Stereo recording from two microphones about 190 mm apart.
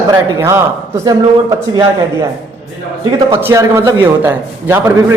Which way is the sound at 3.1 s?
25° right (ahead or behind).